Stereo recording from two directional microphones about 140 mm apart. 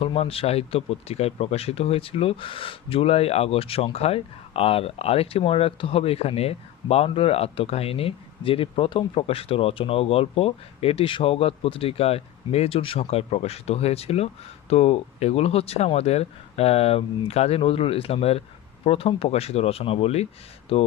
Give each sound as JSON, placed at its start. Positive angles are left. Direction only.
{"t": 0.0, "sound": "speech", "side_deg": 45}